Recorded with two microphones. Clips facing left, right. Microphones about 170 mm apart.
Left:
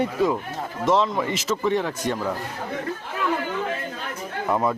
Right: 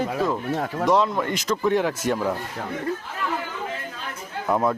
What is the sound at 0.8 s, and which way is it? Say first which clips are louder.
Speech: even; centre (ahead or behind).